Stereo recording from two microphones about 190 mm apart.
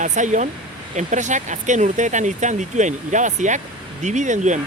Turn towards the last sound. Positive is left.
turn(degrees=-40)  # may be behind; listen again after turning